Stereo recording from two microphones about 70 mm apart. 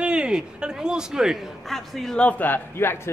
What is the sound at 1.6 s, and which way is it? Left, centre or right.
Speech, centre.